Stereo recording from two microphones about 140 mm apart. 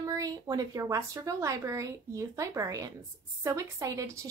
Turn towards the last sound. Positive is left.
turn(degrees=-20)  # may be behind; listen again after turning